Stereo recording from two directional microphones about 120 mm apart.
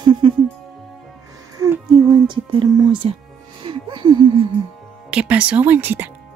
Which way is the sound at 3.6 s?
45° right (ahead or behind).